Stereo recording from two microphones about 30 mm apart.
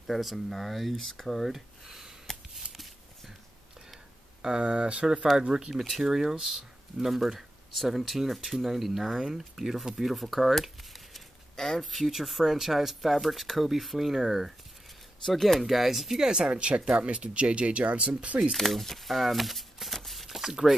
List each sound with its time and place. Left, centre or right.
0.0 s speech: centre
1.5 s a sound: centre
4.4 s speech: right
5.5 s speech: right
5.8 s speech: centre
11.5 s a sound: centre
11.8 s speech: centre
15.2 s speech: centre
15.6 s speech: centre
16.3 s speech: right
16.5 s speech: right
18.6 s a sound: centre